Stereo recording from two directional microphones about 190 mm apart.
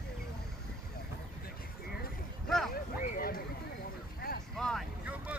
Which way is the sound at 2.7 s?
50° left (ahead or behind).